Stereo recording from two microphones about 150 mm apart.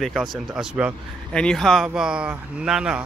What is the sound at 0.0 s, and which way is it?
Speech, centre (ahead or behind).